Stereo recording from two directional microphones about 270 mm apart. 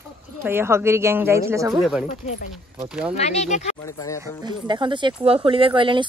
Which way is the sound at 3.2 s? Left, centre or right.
Left.